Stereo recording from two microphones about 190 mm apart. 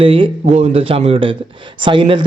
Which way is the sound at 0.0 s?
30° right (ahead or behind).